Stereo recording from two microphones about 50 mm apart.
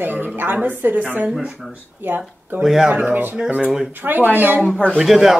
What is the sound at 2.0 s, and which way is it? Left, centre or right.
Speech, right.